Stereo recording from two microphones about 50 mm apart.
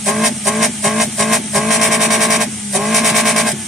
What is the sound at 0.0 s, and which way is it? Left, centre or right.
Vehicle, centre.